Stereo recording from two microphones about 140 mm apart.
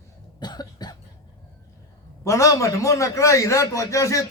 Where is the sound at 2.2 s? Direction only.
20° left (ahead or behind).